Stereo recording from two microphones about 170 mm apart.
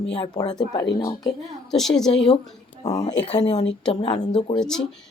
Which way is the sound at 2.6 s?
25° left (ahead or behind).